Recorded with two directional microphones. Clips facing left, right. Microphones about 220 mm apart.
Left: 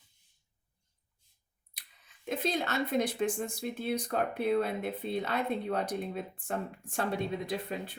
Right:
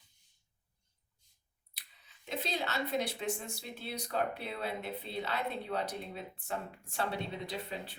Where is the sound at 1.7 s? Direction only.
50° left (ahead or behind).